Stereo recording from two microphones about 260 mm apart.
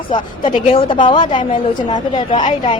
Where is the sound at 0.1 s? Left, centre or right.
Centre.